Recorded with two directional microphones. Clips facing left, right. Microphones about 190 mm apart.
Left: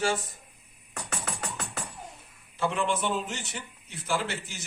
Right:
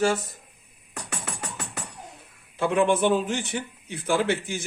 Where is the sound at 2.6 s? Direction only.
55° right (ahead or behind).